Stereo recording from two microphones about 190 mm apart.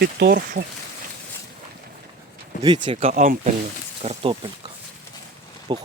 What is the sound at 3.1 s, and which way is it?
Speech, 40° right (ahead or behind).